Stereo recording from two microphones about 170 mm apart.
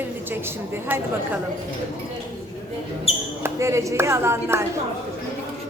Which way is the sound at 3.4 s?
15° right (ahead or behind).